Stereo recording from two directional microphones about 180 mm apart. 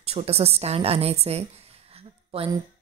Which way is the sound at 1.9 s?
30° right (ahead or behind).